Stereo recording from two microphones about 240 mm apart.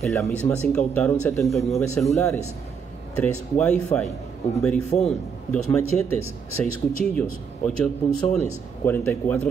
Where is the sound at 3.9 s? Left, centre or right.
Left.